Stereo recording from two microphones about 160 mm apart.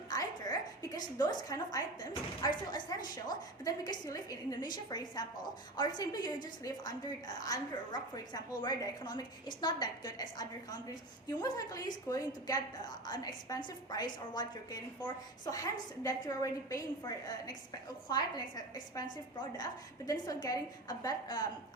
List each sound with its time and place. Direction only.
0.1 s a sound: 25° left (ahead or behind)
2.4 s a woman's voice: 25° left (ahead or behind)
20.1 s a woman's voice: 20° left (ahead or behind)